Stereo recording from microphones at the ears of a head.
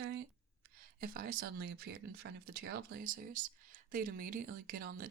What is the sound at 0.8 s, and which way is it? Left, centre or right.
Speech, right.